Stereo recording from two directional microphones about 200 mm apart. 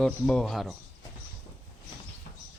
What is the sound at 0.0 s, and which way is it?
Speech, 5° left (ahead or behind).